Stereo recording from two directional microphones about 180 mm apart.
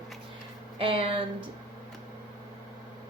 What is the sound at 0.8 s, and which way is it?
Speech, 30° right (ahead or behind).